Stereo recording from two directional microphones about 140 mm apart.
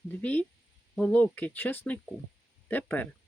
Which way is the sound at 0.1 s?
10° left (ahead or behind).